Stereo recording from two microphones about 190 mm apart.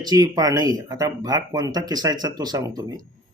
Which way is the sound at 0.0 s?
20° right (ahead or behind).